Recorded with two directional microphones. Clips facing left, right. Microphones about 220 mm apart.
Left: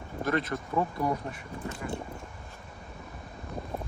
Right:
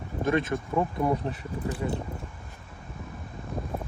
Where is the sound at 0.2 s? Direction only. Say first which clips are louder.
Right 4 dB; 25° right (ahead or behind).